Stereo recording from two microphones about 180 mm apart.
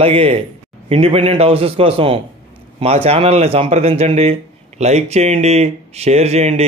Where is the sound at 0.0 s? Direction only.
30° right (ahead or behind).